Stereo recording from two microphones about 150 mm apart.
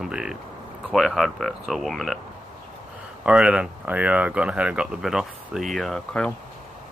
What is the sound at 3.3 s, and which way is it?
Speech, 5° right (ahead or behind).